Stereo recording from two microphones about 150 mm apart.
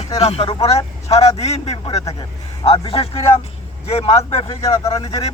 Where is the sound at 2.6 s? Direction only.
40° left (ahead or behind).